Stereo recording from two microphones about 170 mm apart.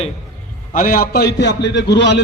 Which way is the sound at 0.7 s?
55° left (ahead or behind).